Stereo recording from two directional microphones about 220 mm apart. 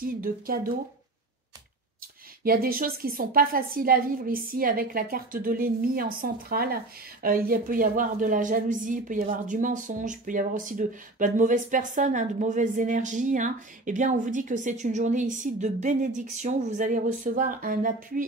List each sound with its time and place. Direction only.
0.0 s a woman's voice: 40° right (ahead or behind)
2.4 s a woman's voice: 40° right (ahead or behind)